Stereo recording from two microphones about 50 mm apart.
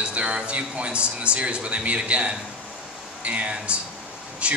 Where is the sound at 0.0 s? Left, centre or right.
Right.